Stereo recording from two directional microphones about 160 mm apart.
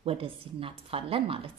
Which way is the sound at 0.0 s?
35° right (ahead or behind).